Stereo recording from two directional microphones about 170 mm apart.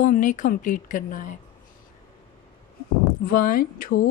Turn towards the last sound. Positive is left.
turn(degrees=55)  # may be behind; listen again after turning